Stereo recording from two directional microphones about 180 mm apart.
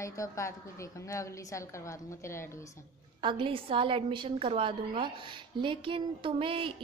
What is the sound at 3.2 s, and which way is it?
A woman's voice, 30° right (ahead or behind).